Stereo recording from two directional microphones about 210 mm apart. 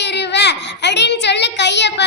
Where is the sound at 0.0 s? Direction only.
55° left (ahead or behind).